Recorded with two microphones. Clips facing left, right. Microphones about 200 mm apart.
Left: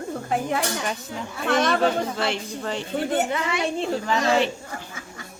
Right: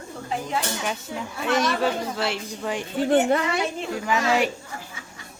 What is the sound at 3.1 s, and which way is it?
Speech, 45° right (ahead or behind).